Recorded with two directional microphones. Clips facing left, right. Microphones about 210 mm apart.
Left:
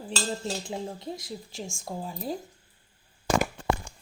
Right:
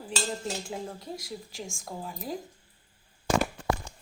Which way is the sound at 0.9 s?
25° left (ahead or behind).